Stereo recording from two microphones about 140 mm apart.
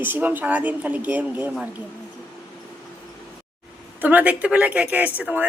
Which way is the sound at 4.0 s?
10° right (ahead or behind).